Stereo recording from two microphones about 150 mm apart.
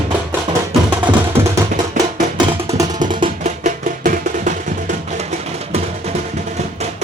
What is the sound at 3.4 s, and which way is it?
Music, 55° right (ahead or behind).